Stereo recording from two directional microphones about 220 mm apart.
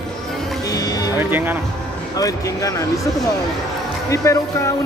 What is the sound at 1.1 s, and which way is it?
Speech, 10° right (ahead or behind).